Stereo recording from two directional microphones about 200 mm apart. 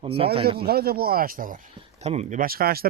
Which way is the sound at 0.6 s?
50° right (ahead or behind).